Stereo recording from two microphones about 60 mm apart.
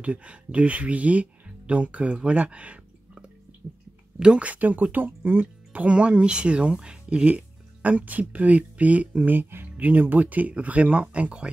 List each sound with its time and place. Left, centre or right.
0.0 s speech: right
2.1 s a sound: centre
4.2 s speech: centre